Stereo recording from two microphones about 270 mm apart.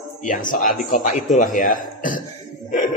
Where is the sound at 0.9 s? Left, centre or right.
Left.